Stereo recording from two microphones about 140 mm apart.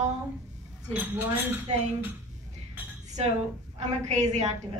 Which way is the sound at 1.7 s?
55° right (ahead or behind).